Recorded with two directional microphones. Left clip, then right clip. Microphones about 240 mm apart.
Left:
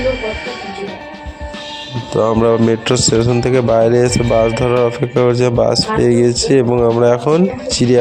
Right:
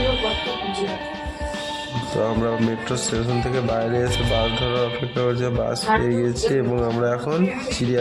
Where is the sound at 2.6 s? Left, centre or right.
Left.